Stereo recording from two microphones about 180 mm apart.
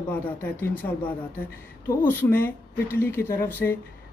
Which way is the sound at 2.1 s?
10° left (ahead or behind).